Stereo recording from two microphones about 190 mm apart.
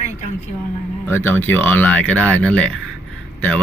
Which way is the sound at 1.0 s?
10° left (ahead or behind).